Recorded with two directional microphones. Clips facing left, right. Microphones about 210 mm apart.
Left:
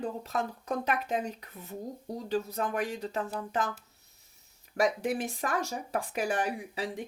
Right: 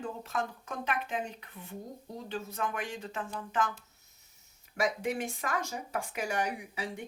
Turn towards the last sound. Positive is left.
turn(degrees=35)  # may be behind; listen again after turning